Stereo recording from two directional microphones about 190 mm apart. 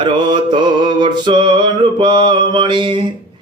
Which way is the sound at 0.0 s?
25° right (ahead or behind).